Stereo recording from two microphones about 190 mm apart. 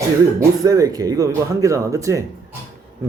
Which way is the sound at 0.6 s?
20° right (ahead or behind).